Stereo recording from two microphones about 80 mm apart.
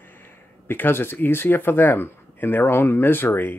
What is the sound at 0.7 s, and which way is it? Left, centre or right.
Speech, left.